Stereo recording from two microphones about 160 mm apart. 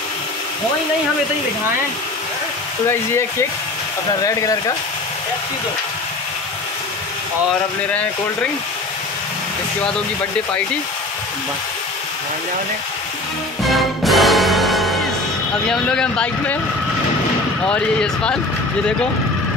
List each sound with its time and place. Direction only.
2.9 s speech: 15° left (ahead or behind)
7.9 s speech: 10° left (ahead or behind)
13.7 s music: centre (ahead or behind)
15.7 s speech: 5° left (ahead or behind)
17.6 s speech: 5° left (ahead or behind)